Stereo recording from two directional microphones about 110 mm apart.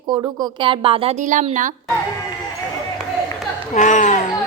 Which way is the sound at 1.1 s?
90° right.